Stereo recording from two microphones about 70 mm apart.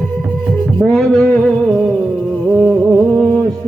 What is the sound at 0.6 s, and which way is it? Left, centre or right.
Music, centre.